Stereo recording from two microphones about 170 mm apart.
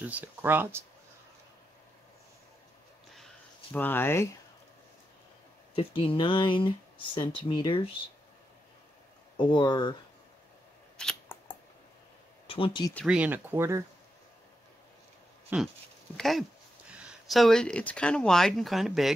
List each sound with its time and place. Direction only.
0.0 s speech: 10° right (ahead or behind)
3.7 s speech: 10° left (ahead or behind)
5.8 s speech: 30° left (ahead or behind)
9.4 s speech: 25° left (ahead or behind)
11.0 s camera: 5° left (ahead or behind)
12.4 s speech: 30° left (ahead or behind)
13.0 s speech: 5° right (ahead or behind)
15.5 s speech: 10° right (ahead or behind)
16.2 s speech: centre (ahead or behind)